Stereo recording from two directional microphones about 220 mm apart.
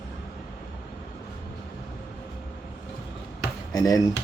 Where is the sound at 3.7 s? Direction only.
15° left (ahead or behind).